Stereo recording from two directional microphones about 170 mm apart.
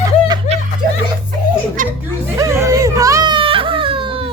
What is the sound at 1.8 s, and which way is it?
Chuckle, 50° right (ahead or behind).